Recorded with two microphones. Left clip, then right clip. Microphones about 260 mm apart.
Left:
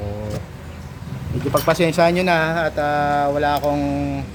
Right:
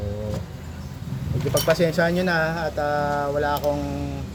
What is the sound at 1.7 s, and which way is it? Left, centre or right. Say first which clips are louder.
Speech: left 4 dB; centre.